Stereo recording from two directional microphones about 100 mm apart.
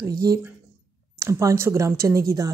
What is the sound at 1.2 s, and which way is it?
Speech, 30° right (ahead or behind).